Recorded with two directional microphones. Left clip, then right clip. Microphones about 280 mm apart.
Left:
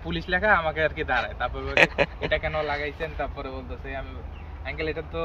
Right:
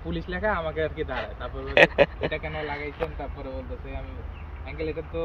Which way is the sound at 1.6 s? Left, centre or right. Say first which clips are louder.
Right 3 dB; centre.